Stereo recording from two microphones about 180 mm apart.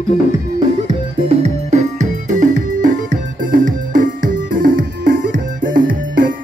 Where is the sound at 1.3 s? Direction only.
35° right (ahead or behind).